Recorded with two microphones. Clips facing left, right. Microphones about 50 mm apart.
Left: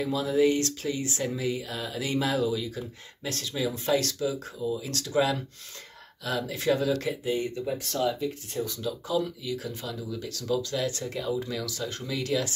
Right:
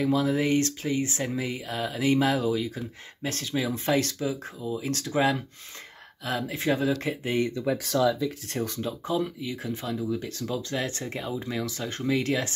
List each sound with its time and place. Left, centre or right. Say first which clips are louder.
0.0 s speech: even; right
7.3 s speech: right 4 dB; right
8.6 s speech: right 2 dB; right